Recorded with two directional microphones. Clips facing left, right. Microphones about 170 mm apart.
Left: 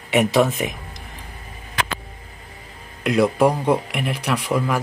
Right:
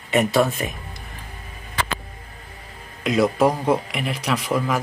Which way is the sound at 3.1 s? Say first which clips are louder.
Left 1 dB; 5° left (ahead or behind).